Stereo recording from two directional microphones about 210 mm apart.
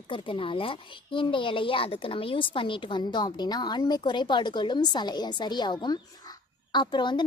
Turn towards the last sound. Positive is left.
turn(degrees=20)  # may be behind; listen again after turning